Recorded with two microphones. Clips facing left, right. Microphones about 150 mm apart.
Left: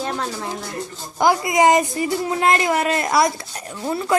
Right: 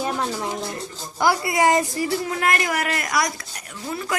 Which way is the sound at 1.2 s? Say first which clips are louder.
Left 3 dB; 20° left (ahead or behind).